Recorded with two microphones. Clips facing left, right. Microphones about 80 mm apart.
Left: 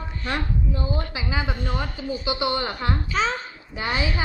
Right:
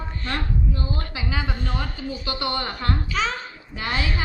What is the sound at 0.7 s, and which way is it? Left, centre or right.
A woman's voice, centre.